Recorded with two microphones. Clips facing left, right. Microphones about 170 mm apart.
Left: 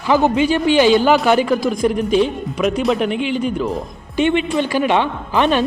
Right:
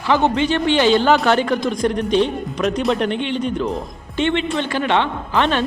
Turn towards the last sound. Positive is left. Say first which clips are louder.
# left 3 dB
turn(degrees=15)  # may be behind; listen again after turning